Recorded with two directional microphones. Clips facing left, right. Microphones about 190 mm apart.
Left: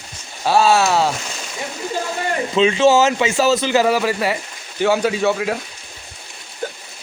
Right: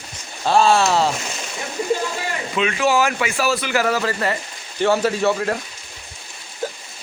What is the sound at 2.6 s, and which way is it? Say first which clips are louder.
A man's voice: left 5 dB; 25° left (ahead or behind).